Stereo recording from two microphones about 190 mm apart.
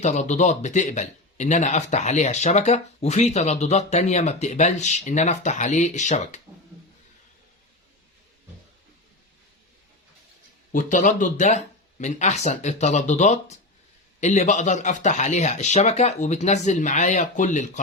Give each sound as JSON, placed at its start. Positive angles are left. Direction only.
{"t": 0.0, "sound": "speech", "side_deg": 40}
{"t": 10.7, "sound": "speech", "side_deg": 45}